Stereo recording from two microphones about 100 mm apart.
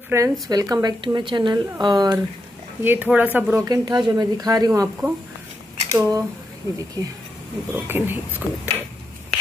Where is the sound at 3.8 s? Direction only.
45° right (ahead or behind).